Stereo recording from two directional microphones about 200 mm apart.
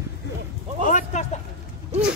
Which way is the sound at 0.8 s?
35° left (ahead or behind).